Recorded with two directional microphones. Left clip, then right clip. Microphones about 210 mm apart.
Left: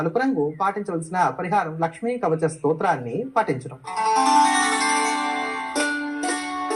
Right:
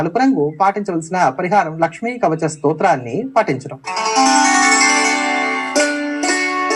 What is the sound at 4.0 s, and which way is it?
Music, 30° right (ahead or behind).